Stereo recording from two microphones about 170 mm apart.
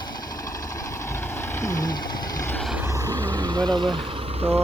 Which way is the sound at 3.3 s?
25° right (ahead or behind).